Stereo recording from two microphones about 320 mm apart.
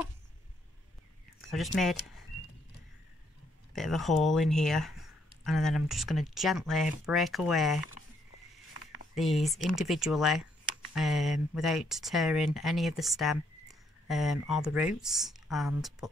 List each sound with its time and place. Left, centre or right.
1.5 s speech: centre
3.7 s speech: centre
8.8 s a sound: left
9.1 s speech: centre